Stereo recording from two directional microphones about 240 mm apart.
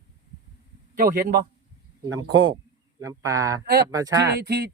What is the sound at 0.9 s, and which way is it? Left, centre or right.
Speech, right.